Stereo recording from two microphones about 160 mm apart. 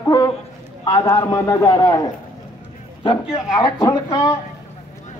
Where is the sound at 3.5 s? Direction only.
20° left (ahead or behind).